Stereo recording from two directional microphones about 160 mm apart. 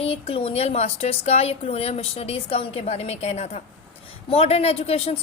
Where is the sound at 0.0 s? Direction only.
40° left (ahead or behind).